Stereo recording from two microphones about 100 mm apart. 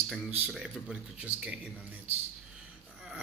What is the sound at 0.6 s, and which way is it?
A man's voice, 10° right (ahead or behind).